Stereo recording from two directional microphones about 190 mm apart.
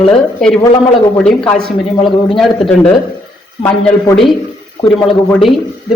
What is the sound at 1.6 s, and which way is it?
Speech, 25° left (ahead or behind).